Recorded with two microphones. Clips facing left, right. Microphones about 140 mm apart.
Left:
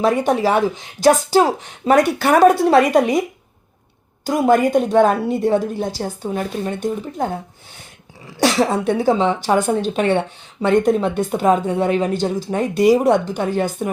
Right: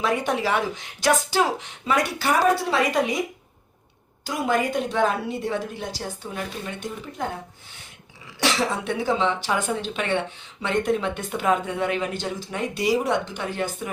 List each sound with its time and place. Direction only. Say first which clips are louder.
0.0 s speech: left 7 dB; 40° left (ahead or behind)
4.2 s speech: left 9 dB; 50° left (ahead or behind)
8.4 s a woman's voice: left 8 dB; 45° left (ahead or behind)